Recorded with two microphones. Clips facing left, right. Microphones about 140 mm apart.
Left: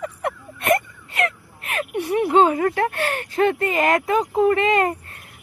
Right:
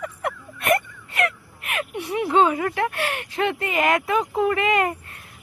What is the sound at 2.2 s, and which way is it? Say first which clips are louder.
Speech: left 2 dB; 35° left (ahead or behind).